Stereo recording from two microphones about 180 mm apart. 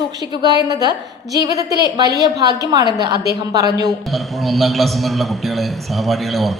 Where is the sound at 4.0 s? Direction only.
Centre (ahead or behind).